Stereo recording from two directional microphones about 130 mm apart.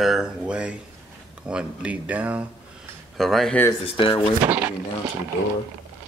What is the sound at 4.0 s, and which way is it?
Speech, 40° left (ahead or behind).